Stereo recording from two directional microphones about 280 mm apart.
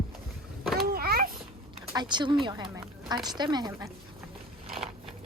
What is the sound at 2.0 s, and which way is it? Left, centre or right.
Speech, centre.